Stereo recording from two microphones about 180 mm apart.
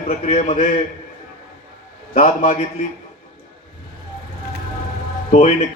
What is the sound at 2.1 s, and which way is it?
Speech, 35° left (ahead or behind).